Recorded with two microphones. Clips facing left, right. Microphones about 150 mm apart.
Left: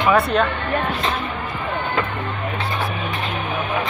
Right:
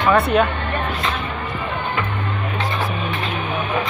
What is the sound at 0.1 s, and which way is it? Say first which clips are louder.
Speech: right 2 dB; centre (ahead or behind).